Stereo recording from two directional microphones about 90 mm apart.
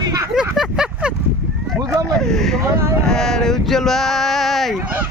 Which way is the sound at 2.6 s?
35° right (ahead or behind).